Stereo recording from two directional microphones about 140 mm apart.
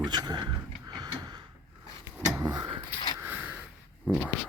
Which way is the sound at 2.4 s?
25° right (ahead or behind).